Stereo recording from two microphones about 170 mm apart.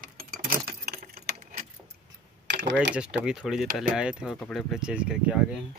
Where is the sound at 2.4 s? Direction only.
85° right.